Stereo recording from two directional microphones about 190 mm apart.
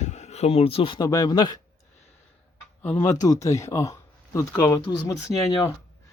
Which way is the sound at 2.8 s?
10° left (ahead or behind).